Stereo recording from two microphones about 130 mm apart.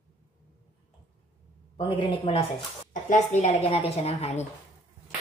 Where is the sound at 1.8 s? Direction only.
40° left (ahead or behind).